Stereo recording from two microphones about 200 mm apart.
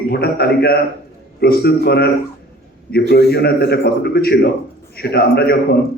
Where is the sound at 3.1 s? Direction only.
55° left (ahead or behind).